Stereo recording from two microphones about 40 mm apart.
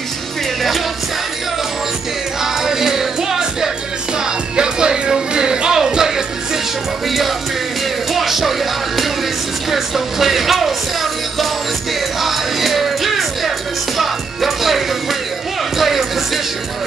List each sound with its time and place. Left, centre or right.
0.6 s music: centre
2.4 s music: centre
13.9 s speech: centre
15.8 s music: centre